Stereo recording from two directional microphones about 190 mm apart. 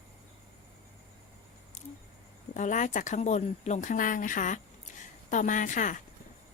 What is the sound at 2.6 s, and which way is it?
Speech, 40° left (ahead or behind).